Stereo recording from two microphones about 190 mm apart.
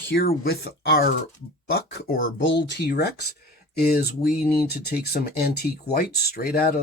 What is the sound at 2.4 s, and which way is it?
Speech, 70° left (ahead or behind).